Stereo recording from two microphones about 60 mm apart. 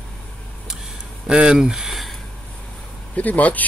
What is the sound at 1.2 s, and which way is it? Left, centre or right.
Speech, centre.